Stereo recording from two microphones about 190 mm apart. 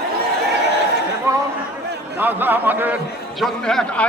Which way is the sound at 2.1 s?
10° right (ahead or behind).